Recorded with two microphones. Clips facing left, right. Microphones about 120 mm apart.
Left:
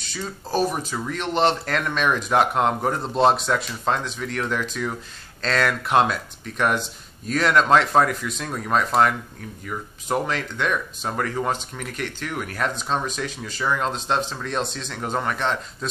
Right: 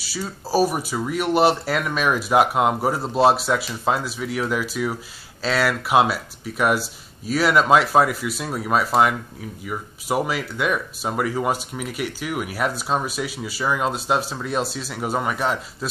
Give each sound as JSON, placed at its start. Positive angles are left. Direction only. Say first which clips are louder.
{"t": 0.0, "sound": "speech", "louder": "right 2 dB", "side_deg": -5}